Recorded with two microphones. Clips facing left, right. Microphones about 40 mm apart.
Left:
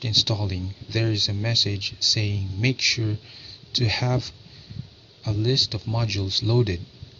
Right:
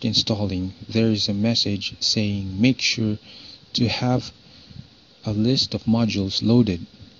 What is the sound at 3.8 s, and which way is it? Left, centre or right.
Speech, right.